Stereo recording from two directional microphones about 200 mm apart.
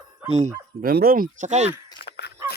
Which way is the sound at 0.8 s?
50° right (ahead or behind).